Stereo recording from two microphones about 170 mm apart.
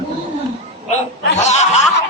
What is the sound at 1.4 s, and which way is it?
Snicker, 40° left (ahead or behind).